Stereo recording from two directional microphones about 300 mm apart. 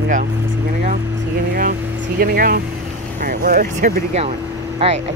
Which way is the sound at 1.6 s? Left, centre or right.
Right.